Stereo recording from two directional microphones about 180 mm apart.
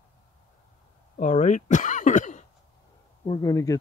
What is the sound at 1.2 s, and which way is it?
Speech, 40° left (ahead or behind).